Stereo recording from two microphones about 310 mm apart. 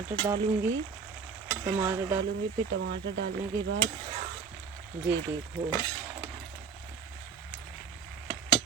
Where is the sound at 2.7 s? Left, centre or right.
Right.